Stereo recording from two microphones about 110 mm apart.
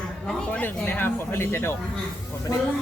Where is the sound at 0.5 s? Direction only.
20° left (ahead or behind).